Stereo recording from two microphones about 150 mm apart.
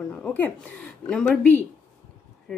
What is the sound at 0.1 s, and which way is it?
A woman's voice, 10° left (ahead or behind).